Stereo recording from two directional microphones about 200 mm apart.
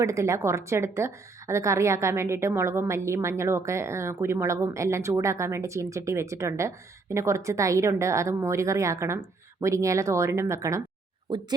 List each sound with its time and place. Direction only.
0.0 s a woman's voice: 15° right (ahead or behind)